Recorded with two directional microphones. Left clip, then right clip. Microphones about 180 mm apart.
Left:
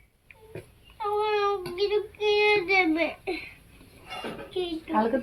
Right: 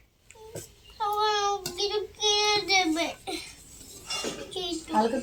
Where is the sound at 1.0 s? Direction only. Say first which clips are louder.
Even; 25° right (ahead or behind).